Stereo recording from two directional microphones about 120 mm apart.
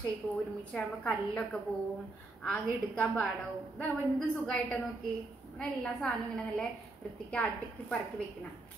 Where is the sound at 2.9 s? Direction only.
5° left (ahead or behind).